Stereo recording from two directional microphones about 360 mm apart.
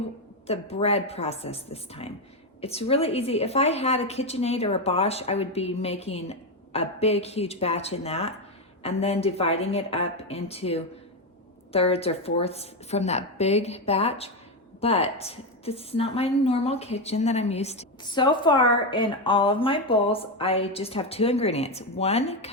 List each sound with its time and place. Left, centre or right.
0.4 s a woman's voice: centre